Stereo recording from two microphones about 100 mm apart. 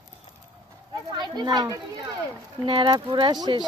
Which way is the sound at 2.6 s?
55° right (ahead or behind).